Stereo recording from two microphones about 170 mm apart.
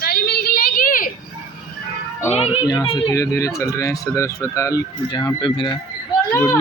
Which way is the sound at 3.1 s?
20° left (ahead or behind).